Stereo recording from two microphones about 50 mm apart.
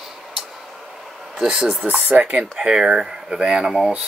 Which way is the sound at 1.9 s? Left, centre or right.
Right.